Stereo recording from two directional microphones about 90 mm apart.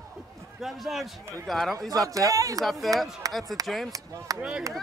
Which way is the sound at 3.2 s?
40° right (ahead or behind).